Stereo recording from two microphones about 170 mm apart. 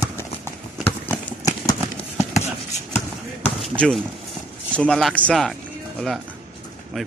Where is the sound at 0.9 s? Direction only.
15° left (ahead or behind).